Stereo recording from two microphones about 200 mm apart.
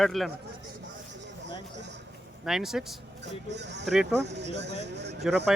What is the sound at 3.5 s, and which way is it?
Speech, 60° right (ahead or behind).